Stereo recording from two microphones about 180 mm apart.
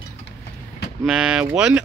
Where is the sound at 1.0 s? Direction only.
5° right (ahead or behind).